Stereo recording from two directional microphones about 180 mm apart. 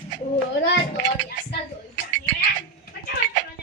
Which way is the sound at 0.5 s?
75° left (ahead or behind).